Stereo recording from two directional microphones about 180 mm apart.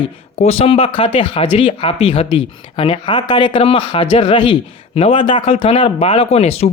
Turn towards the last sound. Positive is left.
turn(degrees=35)  # may be behind; listen again after turning